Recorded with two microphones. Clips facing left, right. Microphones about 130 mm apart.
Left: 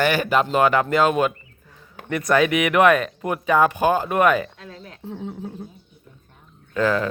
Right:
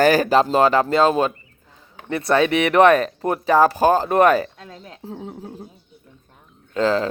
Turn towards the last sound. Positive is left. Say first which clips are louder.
# right 2 dB
turn(degrees=-25)  # may be behind; listen again after turning